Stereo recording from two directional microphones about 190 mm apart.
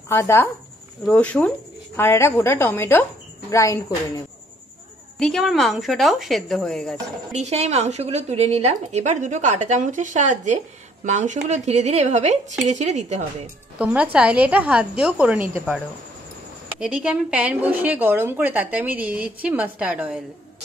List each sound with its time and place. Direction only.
0.1 s a woman's voice: 10° left (ahead or behind)
5.2 s a woman's voice: centre (ahead or behind)
7.3 s speech: 35° right (ahead or behind)
13.7 s a woman's voice: 5° right (ahead or behind)
16.8 s a woman's voice: 5° right (ahead or behind)